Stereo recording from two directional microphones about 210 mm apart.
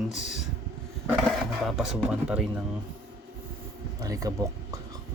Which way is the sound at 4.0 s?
15° right (ahead or behind).